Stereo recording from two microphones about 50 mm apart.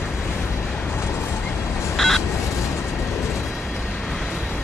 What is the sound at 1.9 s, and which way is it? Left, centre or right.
Fowl, centre.